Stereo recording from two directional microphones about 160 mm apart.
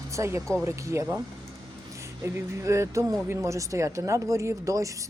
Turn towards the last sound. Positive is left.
turn(degrees=-20)  # may be behind; listen again after turning